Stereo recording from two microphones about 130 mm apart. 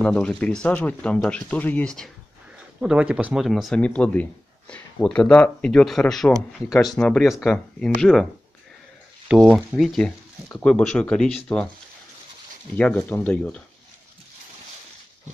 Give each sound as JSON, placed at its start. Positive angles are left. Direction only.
{"t": 0.0, "sound": "speech", "side_deg": 10}
{"t": 2.8, "sound": "speech", "side_deg": -5}
{"t": 9.3, "sound": "speech", "side_deg": -5}
{"t": 12.7, "sound": "speech", "side_deg": 10}